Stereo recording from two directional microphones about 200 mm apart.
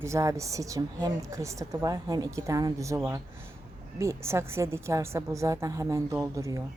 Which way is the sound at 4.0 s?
15° right (ahead or behind).